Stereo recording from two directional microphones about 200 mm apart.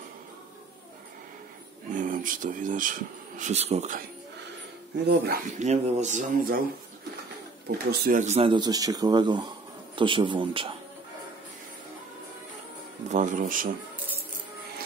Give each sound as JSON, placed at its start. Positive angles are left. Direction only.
{"t": 1.9, "sound": "speech", "side_deg": -40}
{"t": 5.0, "sound": "speech", "side_deg": -55}
{"t": 5.6, "sound": "speech", "side_deg": -35}
{"t": 7.6, "sound": "speech", "side_deg": -45}
{"t": 13.1, "sound": "speech", "side_deg": -40}